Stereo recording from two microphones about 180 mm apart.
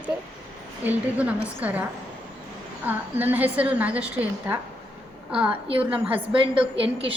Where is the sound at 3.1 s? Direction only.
10° right (ahead or behind).